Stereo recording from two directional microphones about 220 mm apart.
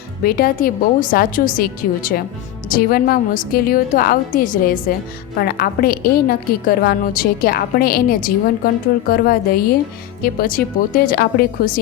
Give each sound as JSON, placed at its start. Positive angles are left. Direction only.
{"t": 0.2, "sound": "a woman's voice", "side_deg": 45}